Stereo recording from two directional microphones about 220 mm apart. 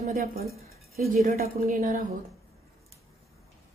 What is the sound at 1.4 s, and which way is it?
Speech, 40° right (ahead or behind).